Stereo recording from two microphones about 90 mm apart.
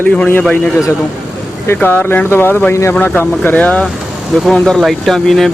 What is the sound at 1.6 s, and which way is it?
Speech, 25° left (ahead or behind).